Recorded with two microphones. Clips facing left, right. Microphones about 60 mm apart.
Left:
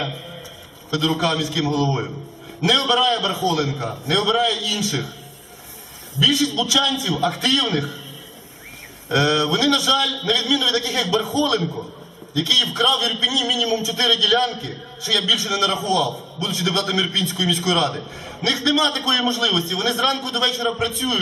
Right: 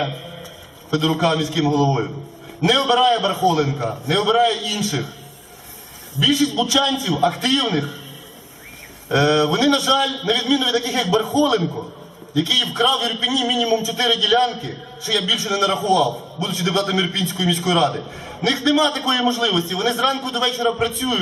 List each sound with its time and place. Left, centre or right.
0.9 s a man's voice: centre
6.2 s a man's voice: centre
9.0 s a man's voice: centre
13.1 s a man's voice: right
13.3 s a man's voice: centre